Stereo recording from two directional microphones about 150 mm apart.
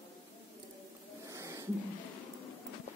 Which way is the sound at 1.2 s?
20° right (ahead or behind).